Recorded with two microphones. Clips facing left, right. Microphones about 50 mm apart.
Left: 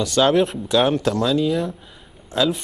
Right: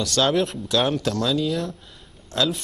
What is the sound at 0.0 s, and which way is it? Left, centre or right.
A man's voice, centre.